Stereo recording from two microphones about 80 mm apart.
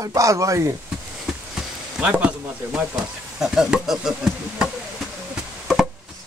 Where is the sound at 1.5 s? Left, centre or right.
Centre.